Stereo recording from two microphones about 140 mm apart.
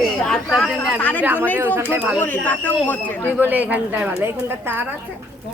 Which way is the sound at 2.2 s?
10° left (ahead or behind).